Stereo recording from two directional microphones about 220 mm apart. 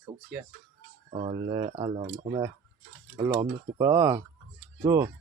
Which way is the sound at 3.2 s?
15° right (ahead or behind).